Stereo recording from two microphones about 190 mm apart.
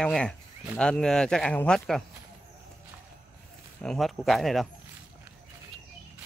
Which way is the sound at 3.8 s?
Centre (ahead or behind).